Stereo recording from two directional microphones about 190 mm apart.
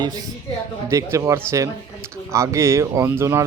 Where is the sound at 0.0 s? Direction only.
20° right (ahead or behind).